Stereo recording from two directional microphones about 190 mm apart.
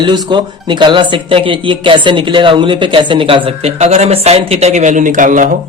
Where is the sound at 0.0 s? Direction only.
25° right (ahead or behind); by 5.5 s 45° right (ahead or behind).